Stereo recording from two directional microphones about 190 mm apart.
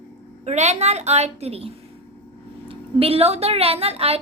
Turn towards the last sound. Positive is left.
turn(degrees=-30)  # may be behind; listen again after turning